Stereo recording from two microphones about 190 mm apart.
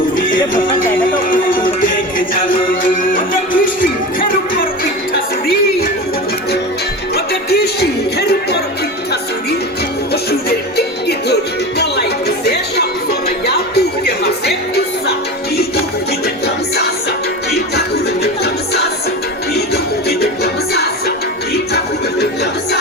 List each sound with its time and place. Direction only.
0.2 s music: 45° left (ahead or behind)
7.5 s a sound: 60° left (ahead or behind)
12.5 s music: 60° left (ahead or behind)
17.7 s music: 60° left (ahead or behind)